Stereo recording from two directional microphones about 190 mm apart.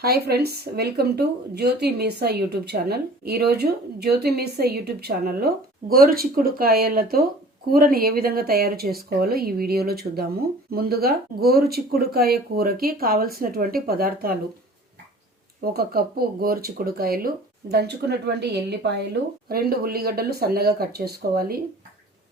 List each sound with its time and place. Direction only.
0.0 s a woman's voice: 55° right (ahead or behind)
15.6 s a woman's voice: 55° right (ahead or behind)